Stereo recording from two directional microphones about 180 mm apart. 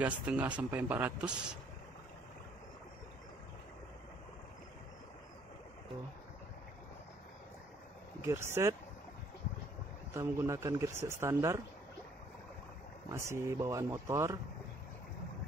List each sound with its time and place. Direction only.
0.0 s a man's voice: 10° right (ahead or behind)
8.2 s a man's voice: 15° right (ahead or behind)
10.1 s a man's voice: 15° right (ahead or behind)
13.1 s a man's voice: 15° right (ahead or behind)